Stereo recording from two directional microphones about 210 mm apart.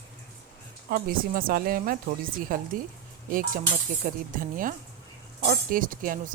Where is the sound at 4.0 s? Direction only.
40° right (ahead or behind).